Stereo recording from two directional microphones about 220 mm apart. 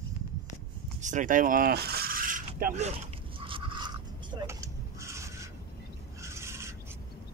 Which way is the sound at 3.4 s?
20° right (ahead or behind).